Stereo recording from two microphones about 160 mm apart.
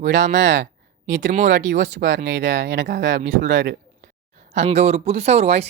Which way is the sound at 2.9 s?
90° right.